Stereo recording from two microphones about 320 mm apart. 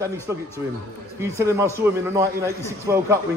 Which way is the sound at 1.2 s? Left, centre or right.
Centre.